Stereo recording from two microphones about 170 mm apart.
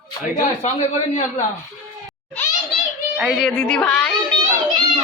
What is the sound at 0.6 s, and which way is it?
Speech, 45° left (ahead or behind).